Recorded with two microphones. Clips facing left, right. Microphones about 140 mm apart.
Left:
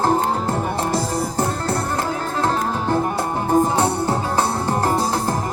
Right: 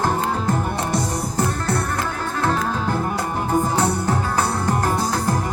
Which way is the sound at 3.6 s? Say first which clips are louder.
Left 1 dB; 30° left (ahead or behind).